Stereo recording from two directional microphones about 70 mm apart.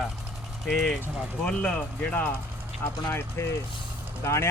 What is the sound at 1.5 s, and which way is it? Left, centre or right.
Speech, centre.